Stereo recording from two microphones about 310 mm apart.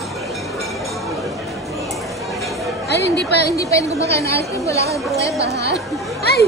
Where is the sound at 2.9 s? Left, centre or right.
Left.